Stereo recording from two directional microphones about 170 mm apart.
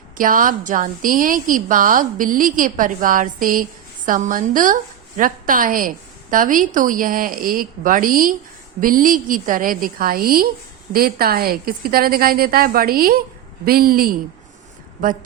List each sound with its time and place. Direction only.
0.2 s a woman's voice: 55° right (ahead or behind)